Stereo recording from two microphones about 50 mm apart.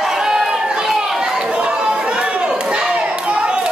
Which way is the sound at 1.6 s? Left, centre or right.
Centre.